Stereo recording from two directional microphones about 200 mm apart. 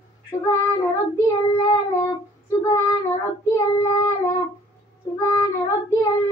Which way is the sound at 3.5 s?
15° left (ahead or behind).